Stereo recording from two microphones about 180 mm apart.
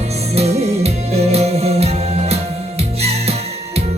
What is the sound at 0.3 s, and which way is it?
Music, 35° right (ahead or behind).